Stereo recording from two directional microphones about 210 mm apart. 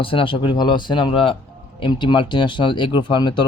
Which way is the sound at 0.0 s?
25° left (ahead or behind).